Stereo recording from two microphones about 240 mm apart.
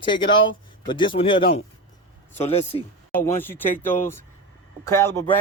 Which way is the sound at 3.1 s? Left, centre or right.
Centre.